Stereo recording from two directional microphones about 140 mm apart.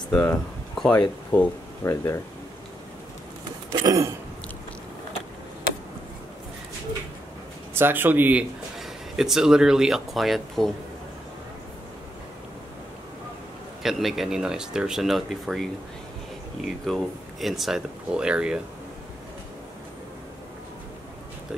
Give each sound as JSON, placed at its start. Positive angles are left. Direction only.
{"t": 0.1, "sound": "speech", "side_deg": 10}
{"t": 3.8, "sound": "a sound", "side_deg": -25}
{"t": 7.7, "sound": "speech", "side_deg": -15}
{"t": 13.8, "sound": "speech", "side_deg": 0}